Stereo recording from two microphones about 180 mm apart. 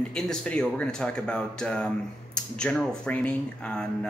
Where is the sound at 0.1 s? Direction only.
5° left (ahead or behind).